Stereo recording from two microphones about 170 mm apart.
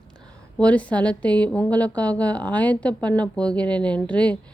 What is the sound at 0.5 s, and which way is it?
A woman's voice, 10° left (ahead or behind).